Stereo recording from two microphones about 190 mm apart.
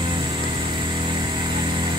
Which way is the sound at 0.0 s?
25° right (ahead or behind).